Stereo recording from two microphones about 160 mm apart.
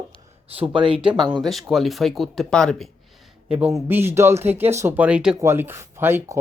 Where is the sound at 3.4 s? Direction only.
10° right (ahead or behind).